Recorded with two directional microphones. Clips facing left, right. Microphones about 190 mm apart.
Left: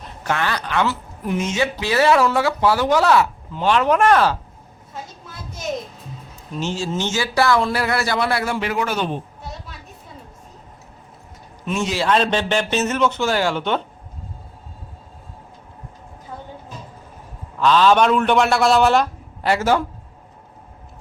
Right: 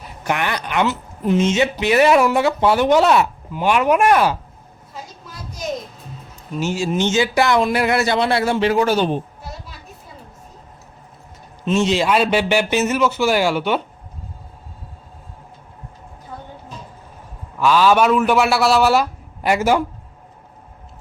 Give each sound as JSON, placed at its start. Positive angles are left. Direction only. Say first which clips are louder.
{"t": 0.0, "sound": "a woman's voice", "louder": "right 1 dB", "side_deg": -15}
{"t": 6.5, "sound": "a woman's voice", "louder": "right 3 dB", "side_deg": -10}
{"t": 9.4, "sound": "a sound", "louder": "even", "side_deg": -5}
{"t": 11.6, "sound": "a man's voice", "louder": "right 5 dB", "side_deg": -25}
{"t": 12.0, "sound": "a man's voice", "louder": "right 2 dB", "side_deg": -10}
{"t": 17.6, "sound": "a man's voice", "louder": "even", "side_deg": -10}